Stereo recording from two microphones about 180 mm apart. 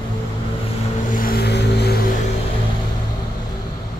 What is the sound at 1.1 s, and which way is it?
Vehicle, 55° left (ahead or behind).